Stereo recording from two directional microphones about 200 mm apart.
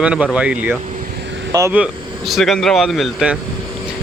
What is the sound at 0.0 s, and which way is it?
Speech, 5° right (ahead or behind).